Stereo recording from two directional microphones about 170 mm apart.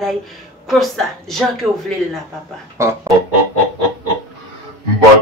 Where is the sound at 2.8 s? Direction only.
15° right (ahead or behind).